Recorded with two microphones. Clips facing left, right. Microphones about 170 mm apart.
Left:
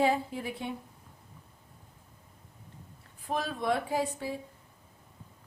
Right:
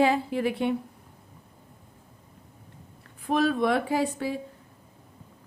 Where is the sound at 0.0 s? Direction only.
80° right.